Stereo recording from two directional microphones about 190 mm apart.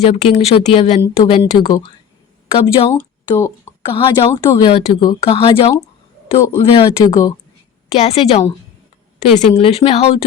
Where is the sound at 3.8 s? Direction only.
25° left (ahead or behind).